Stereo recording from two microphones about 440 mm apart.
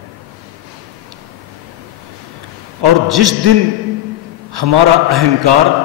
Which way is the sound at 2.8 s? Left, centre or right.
Right.